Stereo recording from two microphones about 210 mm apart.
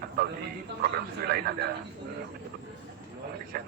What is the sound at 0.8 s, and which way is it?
Speech, 45° right (ahead or behind).